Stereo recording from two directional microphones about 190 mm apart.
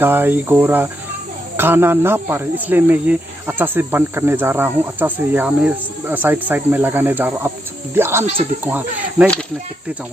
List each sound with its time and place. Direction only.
0.0 s speech: 10° right (ahead or behind)
8.2 s speech: 30° right (ahead or behind)
8.6 s speech: 10° right (ahead or behind)